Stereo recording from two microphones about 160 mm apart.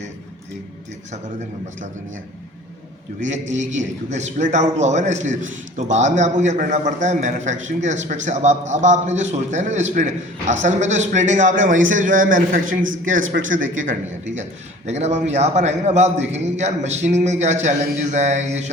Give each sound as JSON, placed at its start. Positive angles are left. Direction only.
{"t": 3.2, "sound": "a man's voice", "side_deg": -50}
{"t": 14.8, "sound": "a man's voice", "side_deg": -45}